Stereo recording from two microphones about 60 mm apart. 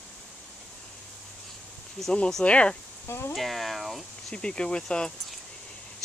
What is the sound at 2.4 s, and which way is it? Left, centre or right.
Speech, left.